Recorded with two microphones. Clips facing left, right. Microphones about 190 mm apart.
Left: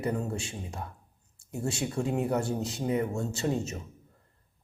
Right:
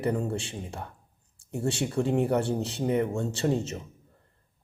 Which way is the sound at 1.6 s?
30° right (ahead or behind).